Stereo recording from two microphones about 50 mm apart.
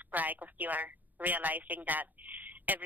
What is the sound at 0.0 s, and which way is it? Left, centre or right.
Speech, right.